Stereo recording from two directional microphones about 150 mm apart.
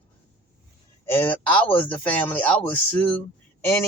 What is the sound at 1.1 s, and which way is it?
A man's voice, 15° left (ahead or behind).